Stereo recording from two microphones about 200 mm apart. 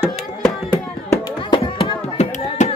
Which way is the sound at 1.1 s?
25° left (ahead or behind).